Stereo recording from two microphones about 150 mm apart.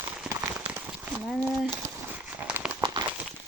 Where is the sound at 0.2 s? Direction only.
10° right (ahead or behind).